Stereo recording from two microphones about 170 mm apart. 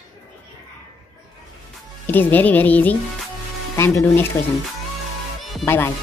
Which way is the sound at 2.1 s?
10° left (ahead or behind).